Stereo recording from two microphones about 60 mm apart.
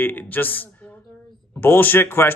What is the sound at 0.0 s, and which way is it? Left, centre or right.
Speech, left.